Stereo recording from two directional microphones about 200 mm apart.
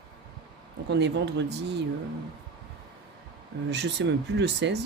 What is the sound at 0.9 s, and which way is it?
Speech, 60° right (ahead or behind).